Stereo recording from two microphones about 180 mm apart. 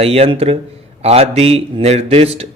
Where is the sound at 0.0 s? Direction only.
35° right (ahead or behind).